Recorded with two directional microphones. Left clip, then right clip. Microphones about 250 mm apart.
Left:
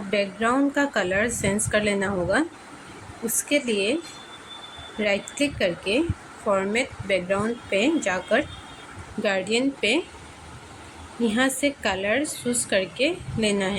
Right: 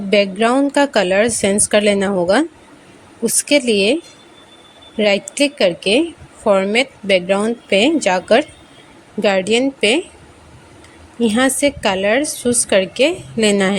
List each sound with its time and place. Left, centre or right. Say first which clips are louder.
0.1 s a woman's voice: right 9 dB; right
3.5 s a woman's voice: right 9 dB; right
4.9 s a woman's voice: right 9 dB; right
11.2 s a woman's voice: right 8 dB; right